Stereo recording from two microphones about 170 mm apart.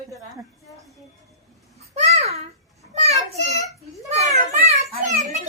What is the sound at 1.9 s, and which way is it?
Babbling, 40° right (ahead or behind).